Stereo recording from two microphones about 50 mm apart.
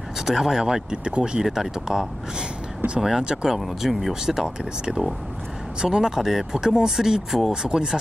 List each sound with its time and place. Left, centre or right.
0.2 s speech: centre